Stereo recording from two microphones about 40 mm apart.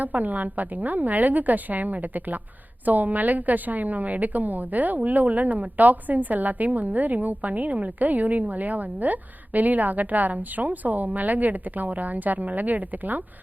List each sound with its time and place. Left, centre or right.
0.0 s a woman's voice: right